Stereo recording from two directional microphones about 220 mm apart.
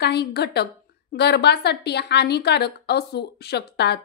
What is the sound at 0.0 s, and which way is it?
A woman's voice, 50° left (ahead or behind).